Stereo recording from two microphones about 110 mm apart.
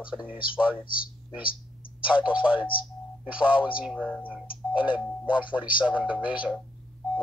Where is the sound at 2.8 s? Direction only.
10° right (ahead or behind).